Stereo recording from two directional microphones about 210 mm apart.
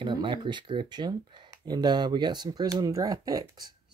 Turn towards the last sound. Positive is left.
turn(degrees=-15)  # may be behind; listen again after turning